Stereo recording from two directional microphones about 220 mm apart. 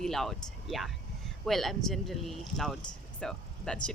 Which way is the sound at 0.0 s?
Centre (ahead or behind).